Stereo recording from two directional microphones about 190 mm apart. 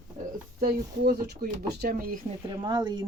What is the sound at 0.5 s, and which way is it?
Speech, 55° right (ahead or behind).